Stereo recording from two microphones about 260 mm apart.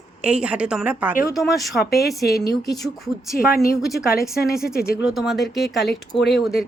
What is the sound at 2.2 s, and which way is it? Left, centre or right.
A woman's voice, left.